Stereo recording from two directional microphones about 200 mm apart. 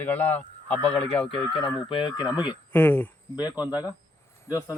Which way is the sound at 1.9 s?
20° left (ahead or behind).